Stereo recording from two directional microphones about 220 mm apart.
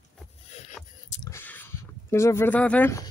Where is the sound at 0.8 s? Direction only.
Centre (ahead or behind).